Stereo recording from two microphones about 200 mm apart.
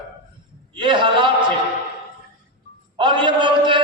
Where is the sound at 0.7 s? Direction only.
25° right (ahead or behind).